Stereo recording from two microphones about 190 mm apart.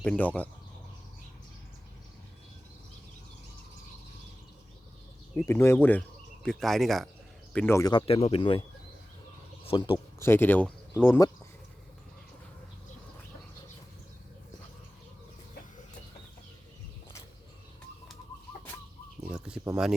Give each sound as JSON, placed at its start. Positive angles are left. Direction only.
{"t": 0.0, "sound": "speech", "side_deg": 5}
{"t": 5.5, "sound": "speech", "side_deg": 10}
{"t": 7.5, "sound": "speech", "side_deg": 10}
{"t": 9.6, "sound": "speech", "side_deg": 25}
{"t": 10.2, "sound": "speech", "side_deg": 10}
{"t": 19.3, "sound": "a sound", "side_deg": -5}
{"t": 19.7, "sound": "speech", "side_deg": -5}